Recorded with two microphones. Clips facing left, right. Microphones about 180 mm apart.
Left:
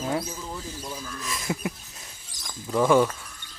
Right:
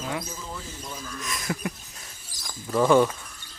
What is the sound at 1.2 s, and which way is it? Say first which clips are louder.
Speech: left 1 dB; 25° left (ahead or behind).